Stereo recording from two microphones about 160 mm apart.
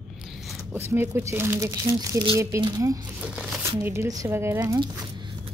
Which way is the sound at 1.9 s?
25° right (ahead or behind).